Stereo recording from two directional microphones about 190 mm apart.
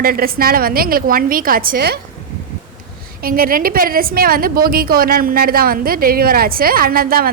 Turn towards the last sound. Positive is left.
turn(degrees=-50)  # may be behind; listen again after turning